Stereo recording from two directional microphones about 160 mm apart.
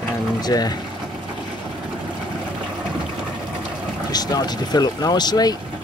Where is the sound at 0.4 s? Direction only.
25° left (ahead or behind).